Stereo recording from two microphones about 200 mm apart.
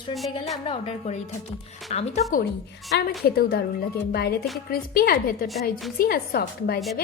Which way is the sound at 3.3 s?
50° left (ahead or behind).